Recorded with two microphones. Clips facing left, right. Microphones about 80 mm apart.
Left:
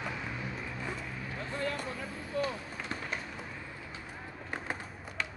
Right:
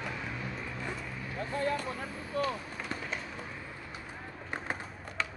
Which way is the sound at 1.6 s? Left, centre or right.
Right.